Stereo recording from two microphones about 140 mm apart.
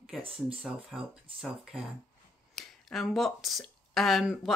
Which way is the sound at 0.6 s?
5° right (ahead or behind).